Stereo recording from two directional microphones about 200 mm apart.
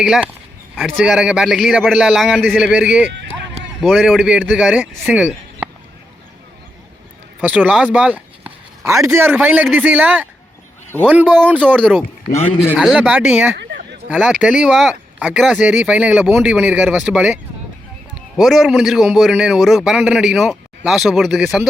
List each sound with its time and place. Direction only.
0.0 s a man's voice: 5° right (ahead or behind)
7.4 s a man's voice: 5° right (ahead or behind)
7.9 s a sound: 5° right (ahead or behind)
9.1 s a man's voice: 10° right (ahead or behind)
13.6 s a sound: 55° right (ahead or behind)
14.1 s a man's voice: 5° right (ahead or behind)